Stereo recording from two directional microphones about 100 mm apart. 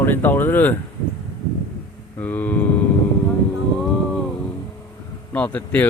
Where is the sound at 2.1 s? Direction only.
15° left (ahead or behind).